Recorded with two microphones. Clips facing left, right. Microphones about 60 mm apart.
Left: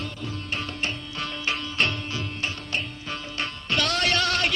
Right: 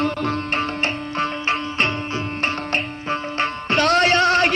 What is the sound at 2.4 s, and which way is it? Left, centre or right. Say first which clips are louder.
Music: right 9 dB; right.